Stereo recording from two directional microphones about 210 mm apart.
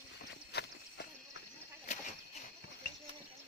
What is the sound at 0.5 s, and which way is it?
Walk, 55° left (ahead or behind).